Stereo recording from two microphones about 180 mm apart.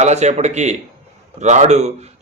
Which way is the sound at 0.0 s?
40° right (ahead or behind).